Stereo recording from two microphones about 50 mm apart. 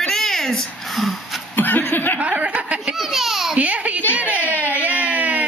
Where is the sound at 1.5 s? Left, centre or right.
Left.